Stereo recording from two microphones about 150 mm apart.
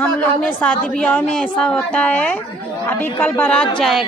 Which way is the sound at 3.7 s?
Centre (ahead or behind).